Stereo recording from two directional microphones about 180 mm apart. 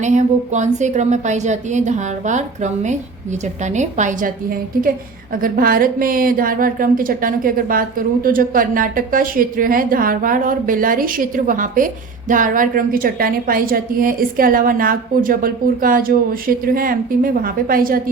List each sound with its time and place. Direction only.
0.0 s a woman's voice: 40° right (ahead or behind)